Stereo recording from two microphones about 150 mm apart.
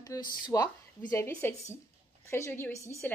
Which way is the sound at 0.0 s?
25° left (ahead or behind).